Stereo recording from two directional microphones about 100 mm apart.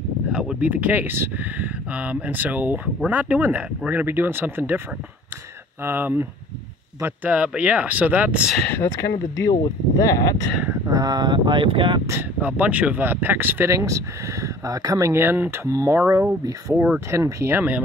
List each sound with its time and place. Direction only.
0.3 s speech: 10° right (ahead or behind)
5.9 s speech: 20° right (ahead or behind)
9.9 s speech: 35° left (ahead or behind)
10.9 s speech: 40° right (ahead or behind); by 12.0 s 60° right (ahead or behind)
12.1 s speech: 20° right (ahead or behind)
13.7 s speech: 30° right (ahead or behind)
16.7 s speech: 15° right (ahead or behind)
17.1 s speech: 30° right (ahead or behind)